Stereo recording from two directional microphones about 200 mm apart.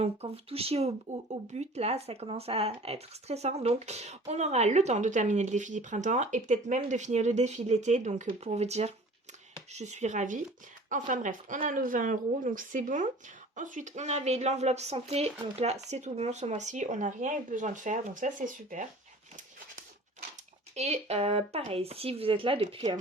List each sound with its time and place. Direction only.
0.0 s speech: 30° right (ahead or behind)
20.7 s speech: 30° right (ahead or behind)